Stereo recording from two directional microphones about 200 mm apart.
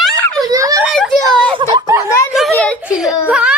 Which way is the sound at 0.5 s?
15° right (ahead or behind).